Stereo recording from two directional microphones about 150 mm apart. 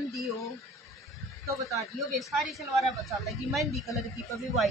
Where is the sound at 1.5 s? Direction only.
20° right (ahead or behind).